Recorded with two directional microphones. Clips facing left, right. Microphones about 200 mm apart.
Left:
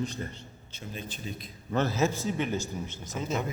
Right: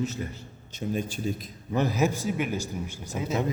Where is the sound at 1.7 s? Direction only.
15° right (ahead or behind).